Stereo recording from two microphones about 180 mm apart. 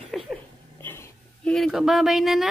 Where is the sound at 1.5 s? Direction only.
Centre (ahead or behind).